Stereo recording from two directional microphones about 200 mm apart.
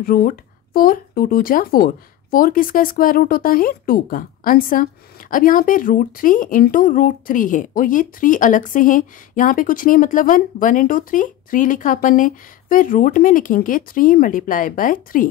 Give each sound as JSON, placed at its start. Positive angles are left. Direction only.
{"t": 0.0, "sound": "speech", "side_deg": 45}